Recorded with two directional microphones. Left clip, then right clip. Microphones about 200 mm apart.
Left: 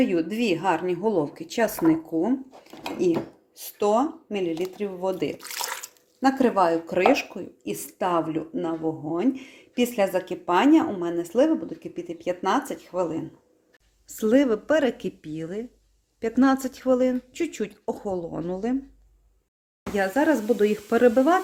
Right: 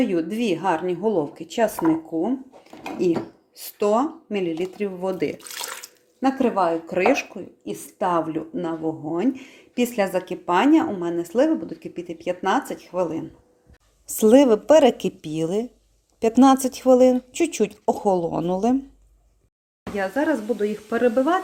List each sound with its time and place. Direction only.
0.0 s speech: centre (ahead or behind)
3.0 s speech: 5° right (ahead or behind)
6.3 s a woman's voice: 5° left (ahead or behind)
19.8 s speech: 20° left (ahead or behind)